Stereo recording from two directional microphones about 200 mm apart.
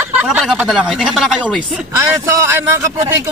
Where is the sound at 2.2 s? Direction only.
15° right (ahead or behind).